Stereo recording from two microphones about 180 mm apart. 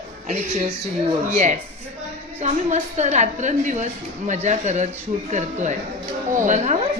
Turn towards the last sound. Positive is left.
turn(degrees=-40)  # may be behind; listen again after turning